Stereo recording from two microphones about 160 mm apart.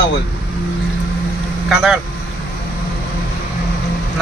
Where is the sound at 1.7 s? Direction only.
5° right (ahead or behind).